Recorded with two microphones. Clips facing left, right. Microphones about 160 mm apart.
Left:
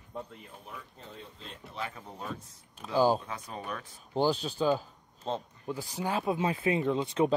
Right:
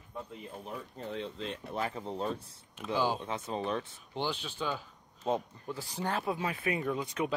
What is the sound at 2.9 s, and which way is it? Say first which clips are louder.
Speech: left 6 dB; 40° left (ahead or behind).